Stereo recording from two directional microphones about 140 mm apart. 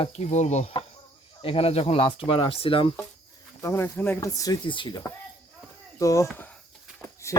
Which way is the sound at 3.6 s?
15° left (ahead or behind).